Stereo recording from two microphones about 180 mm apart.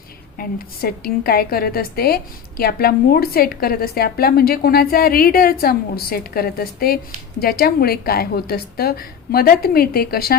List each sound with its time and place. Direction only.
0.3 s a woman's voice: 55° left (ahead or behind)